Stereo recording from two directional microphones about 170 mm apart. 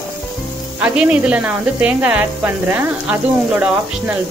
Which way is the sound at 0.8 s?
5° right (ahead or behind).